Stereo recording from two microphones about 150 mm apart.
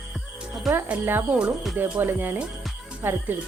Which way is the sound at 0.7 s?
15° right (ahead or behind).